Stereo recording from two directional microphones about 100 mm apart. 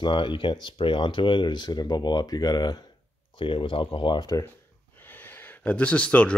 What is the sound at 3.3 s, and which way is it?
Speech, 60° left (ahead or behind).